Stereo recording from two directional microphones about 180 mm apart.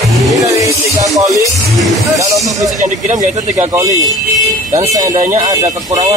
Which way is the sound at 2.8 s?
45° right (ahead or behind).